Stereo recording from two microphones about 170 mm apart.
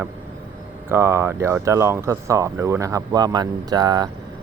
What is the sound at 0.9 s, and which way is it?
Speech, 15° right (ahead or behind).